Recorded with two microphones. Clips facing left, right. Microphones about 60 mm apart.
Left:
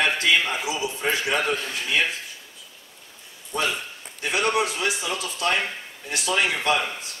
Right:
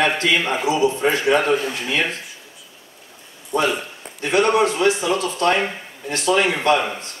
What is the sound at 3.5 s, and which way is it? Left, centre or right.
A man's voice, centre.